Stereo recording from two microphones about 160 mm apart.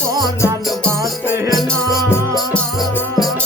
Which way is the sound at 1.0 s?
15° right (ahead or behind).